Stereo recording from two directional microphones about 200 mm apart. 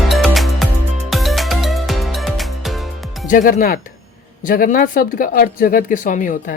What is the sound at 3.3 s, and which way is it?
Speech, 40° left (ahead or behind).